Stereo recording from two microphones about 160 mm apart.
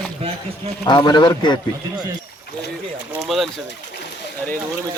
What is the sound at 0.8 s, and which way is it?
Speech, 25° left (ahead or behind).